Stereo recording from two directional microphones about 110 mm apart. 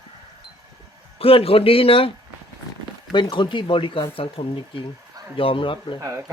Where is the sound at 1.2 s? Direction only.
60° left (ahead or behind).